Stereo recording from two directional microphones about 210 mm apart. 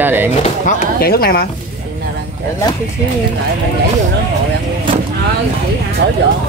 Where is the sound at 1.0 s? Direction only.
45° left (ahead or behind).